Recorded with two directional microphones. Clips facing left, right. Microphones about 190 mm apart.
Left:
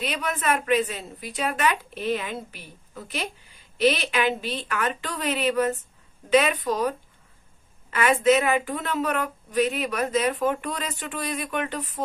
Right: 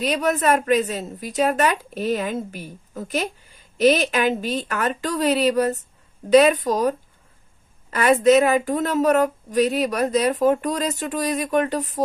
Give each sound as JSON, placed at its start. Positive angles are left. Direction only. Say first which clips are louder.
{"t": 0.0, "sound": "a woman's voice", "louder": "right 7 dB", "side_deg": -40}